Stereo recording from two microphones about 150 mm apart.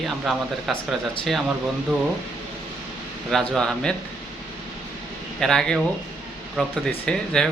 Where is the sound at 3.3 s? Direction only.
Centre (ahead or behind).